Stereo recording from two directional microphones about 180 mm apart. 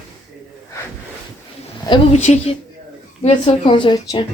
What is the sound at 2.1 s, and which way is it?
A woman's voice, 40° left (ahead or behind).